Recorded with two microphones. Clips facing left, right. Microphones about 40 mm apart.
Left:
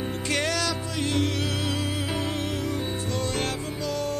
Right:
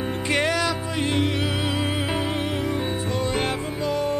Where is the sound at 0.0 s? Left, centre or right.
Right.